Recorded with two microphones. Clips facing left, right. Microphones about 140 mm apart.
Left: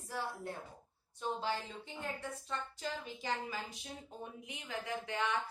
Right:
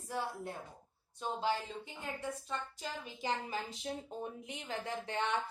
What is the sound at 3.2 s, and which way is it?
A woman's voice, 25° right (ahead or behind).